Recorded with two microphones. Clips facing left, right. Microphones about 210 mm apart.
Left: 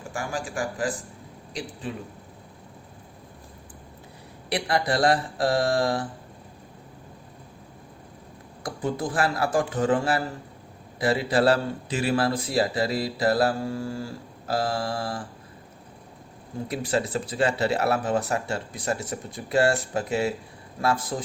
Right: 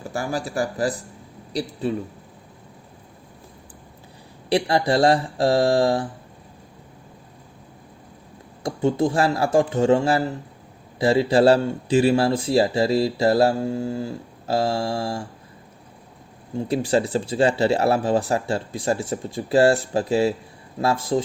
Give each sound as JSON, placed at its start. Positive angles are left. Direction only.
{"t": 0.0, "sound": "speech", "side_deg": -35}
{"t": 4.4, "sound": "speech", "side_deg": -30}
{"t": 8.6, "sound": "speech", "side_deg": -25}
{"t": 16.6, "sound": "speech", "side_deg": -30}